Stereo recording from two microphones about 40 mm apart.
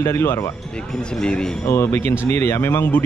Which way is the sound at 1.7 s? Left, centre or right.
Left.